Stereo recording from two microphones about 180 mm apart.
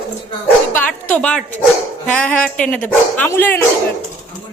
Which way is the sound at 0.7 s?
10° left (ahead or behind).